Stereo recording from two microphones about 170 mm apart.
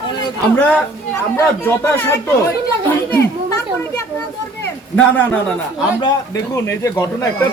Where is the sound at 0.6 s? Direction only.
5° left (ahead or behind).